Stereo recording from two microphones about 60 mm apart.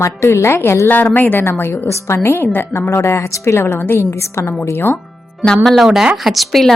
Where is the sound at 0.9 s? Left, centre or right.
Left.